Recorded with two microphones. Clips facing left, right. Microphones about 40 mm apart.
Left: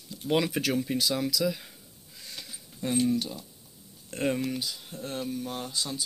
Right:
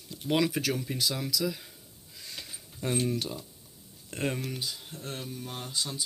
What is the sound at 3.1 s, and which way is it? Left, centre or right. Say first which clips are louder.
Speech: left 2 dB; right.